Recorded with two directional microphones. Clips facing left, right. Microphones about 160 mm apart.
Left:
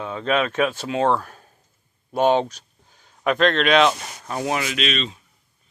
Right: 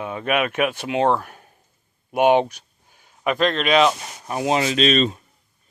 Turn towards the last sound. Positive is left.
turn(degrees=-45)  # may be behind; listen again after turning